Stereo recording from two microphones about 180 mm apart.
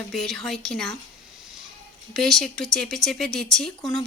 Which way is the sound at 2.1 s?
Centre (ahead or behind).